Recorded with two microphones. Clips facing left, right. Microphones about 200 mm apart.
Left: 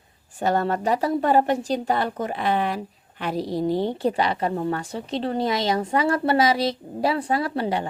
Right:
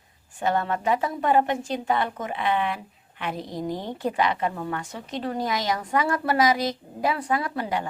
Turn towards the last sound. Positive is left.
turn(degrees=30)  # may be behind; listen again after turning